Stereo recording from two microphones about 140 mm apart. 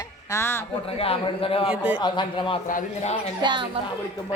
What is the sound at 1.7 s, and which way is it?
Speech, 10° right (ahead or behind).